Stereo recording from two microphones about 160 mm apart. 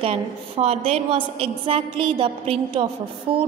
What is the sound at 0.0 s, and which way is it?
A woman's voice, 40° right (ahead or behind).